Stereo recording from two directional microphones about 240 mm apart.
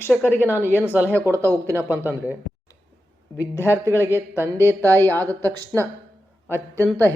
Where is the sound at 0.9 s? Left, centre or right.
Centre.